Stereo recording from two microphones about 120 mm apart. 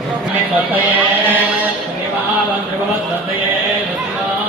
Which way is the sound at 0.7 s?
15° right (ahead or behind).